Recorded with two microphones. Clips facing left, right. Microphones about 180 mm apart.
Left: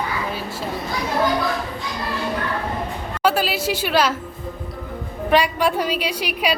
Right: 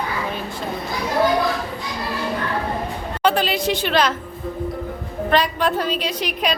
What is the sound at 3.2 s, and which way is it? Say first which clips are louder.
Speech: right 1 dB; 5° left (ahead or behind).